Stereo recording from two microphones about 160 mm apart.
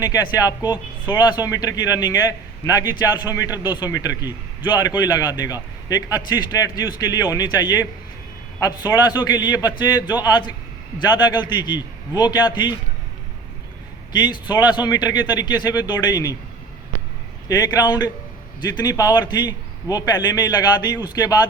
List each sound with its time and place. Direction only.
0.0 s speech: 25° left (ahead or behind)
14.1 s speech: 25° left (ahead or behind)
17.5 s speech: 25° left (ahead or behind)